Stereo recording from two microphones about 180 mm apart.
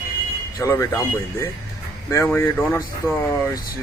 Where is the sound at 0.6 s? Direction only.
15° left (ahead or behind).